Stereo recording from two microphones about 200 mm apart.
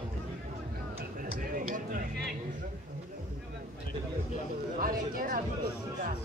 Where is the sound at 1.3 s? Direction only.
45° right (ahead or behind).